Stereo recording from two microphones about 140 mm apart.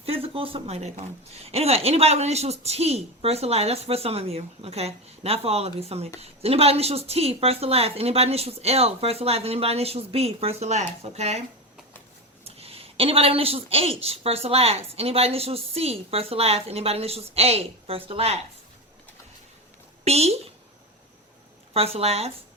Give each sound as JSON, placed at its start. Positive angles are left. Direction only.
{"t": 0.0, "sound": "a woman's voice", "side_deg": -45}
{"t": 12.5, "sound": "a woman's voice", "side_deg": -45}
{"t": 20.1, "sound": "a woman's voice", "side_deg": -45}
{"t": 21.7, "sound": "a woman's voice", "side_deg": -45}